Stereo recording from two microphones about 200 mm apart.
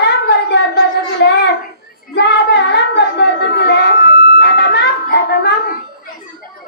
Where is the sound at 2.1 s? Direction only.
55° left (ahead or behind).